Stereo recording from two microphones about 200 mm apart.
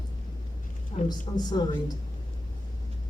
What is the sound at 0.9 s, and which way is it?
Speech, 25° left (ahead or behind).